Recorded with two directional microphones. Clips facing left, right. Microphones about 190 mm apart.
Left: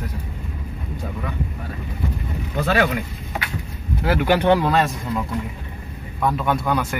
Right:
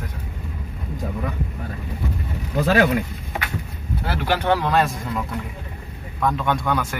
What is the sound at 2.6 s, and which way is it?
Speech, 35° right (ahead or behind).